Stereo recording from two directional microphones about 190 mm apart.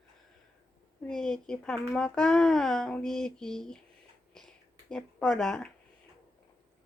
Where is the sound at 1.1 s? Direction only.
5° left (ahead or behind).